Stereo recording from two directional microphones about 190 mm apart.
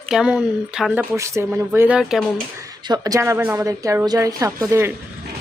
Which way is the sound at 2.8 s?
20° right (ahead or behind).